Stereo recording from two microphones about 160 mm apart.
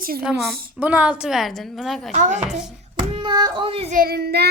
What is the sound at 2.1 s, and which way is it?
Speech, 50° right (ahead or behind).